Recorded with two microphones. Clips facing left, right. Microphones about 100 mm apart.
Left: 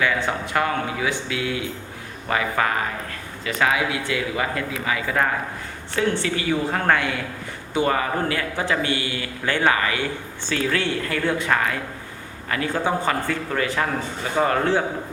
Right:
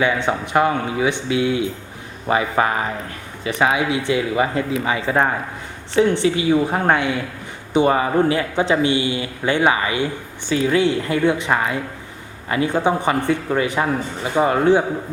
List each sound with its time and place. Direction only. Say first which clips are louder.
0.0 s a man's voice: right 4 dB; 20° right (ahead or behind)